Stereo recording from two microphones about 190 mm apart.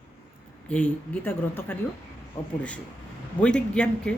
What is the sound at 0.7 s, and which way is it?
Speech, 5° left (ahead or behind).